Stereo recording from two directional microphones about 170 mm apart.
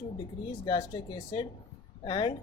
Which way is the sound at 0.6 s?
25° left (ahead or behind).